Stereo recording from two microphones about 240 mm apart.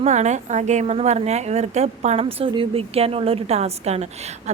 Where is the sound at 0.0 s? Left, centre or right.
Right.